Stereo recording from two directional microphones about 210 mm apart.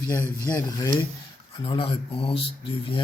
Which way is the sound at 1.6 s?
25° left (ahead or behind).